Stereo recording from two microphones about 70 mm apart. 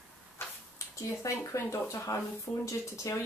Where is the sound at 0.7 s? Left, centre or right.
Left.